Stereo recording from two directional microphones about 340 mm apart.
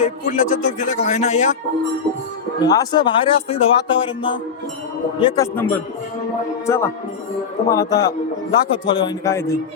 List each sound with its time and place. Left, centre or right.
0.0 s speech: left
2.6 s speech: centre